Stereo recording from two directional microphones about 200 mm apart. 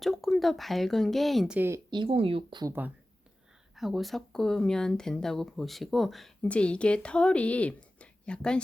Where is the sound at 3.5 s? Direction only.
Centre (ahead or behind).